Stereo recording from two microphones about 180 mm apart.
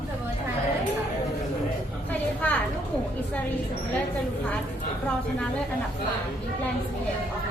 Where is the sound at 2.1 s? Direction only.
10° left (ahead or behind).